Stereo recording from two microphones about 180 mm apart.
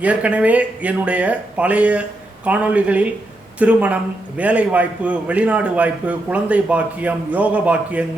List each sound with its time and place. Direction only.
0.0 s a man's voice: 5° right (ahead or behind)